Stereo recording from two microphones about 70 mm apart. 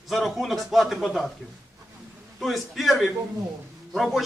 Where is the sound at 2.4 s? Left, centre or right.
Centre.